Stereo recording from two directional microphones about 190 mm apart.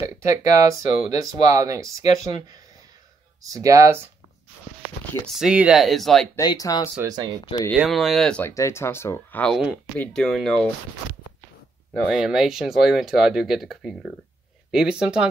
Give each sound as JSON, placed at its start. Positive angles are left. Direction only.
{"t": 0.0, "sound": "speech", "side_deg": -15}
{"t": 3.4, "sound": "speech", "side_deg": -15}
{"t": 5.2, "sound": "speech", "side_deg": 0}
{"t": 6.3, "sound": "speech", "side_deg": 20}
{"t": 7.0, "sound": "speech", "side_deg": -20}
{"t": 7.4, "sound": "speech", "side_deg": 20}
{"t": 7.7, "sound": "speech", "side_deg": 0}
{"t": 11.9, "sound": "speech", "side_deg": 0}